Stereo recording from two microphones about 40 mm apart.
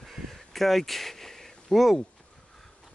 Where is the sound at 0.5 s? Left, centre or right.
Centre.